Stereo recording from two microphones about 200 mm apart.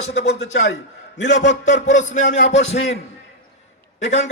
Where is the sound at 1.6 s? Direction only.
40° left (ahead or behind).